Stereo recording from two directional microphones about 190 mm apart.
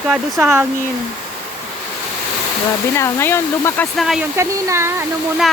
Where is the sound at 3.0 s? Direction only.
15° left (ahead or behind).